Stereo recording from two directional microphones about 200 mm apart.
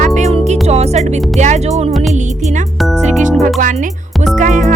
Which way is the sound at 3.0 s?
35° right (ahead or behind).